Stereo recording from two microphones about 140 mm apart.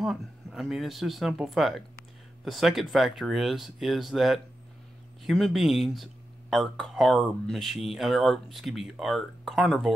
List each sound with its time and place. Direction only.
0.0 s speech: centre (ahead or behind)